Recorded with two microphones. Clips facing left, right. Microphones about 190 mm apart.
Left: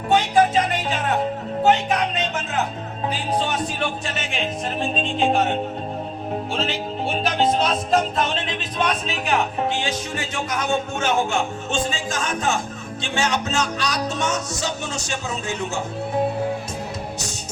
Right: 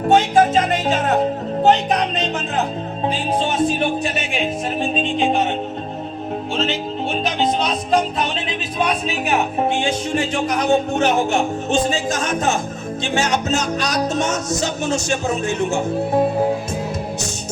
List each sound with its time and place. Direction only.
0.1 s music: 45° right (ahead or behind)
3.1 s speech: 25° right (ahead or behind)
4.8 s music: centre (ahead or behind)
7.1 s music: 5° left (ahead or behind)
9.2 s music: 20° right (ahead or behind); by 15.6 s 50° right (ahead or behind)